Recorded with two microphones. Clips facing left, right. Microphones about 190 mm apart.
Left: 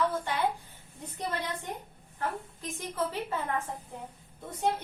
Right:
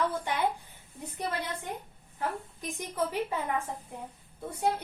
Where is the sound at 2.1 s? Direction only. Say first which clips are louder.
Even; 15° right (ahead or behind).